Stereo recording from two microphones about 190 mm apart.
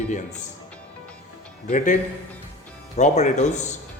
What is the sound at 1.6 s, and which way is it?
A man's voice, 40° left (ahead or behind).